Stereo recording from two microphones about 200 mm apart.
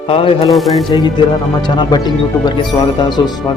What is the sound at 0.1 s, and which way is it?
Speech, 30° left (ahead or behind).